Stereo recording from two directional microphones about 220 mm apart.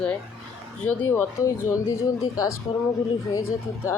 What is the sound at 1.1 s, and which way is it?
Speech, 10° left (ahead or behind).